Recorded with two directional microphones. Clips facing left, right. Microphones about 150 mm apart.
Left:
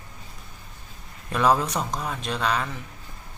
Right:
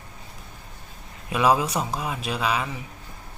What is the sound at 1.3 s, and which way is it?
A man's voice, 5° right (ahead or behind).